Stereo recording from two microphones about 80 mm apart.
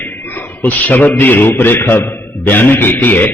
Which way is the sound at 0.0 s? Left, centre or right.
Left.